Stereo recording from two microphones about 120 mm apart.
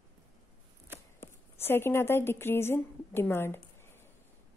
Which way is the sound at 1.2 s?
20° left (ahead or behind).